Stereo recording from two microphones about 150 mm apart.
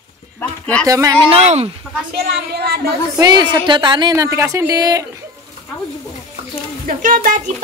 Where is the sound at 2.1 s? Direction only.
90° right.